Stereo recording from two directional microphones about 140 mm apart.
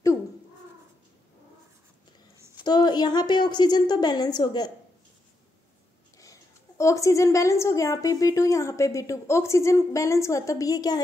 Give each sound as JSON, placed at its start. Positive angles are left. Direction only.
{"t": 2.3, "sound": "a sound", "side_deg": -20}
{"t": 2.6, "sound": "a woman's voice", "side_deg": 30}
{"t": 6.1, "sound": "a woman's voice", "side_deg": 25}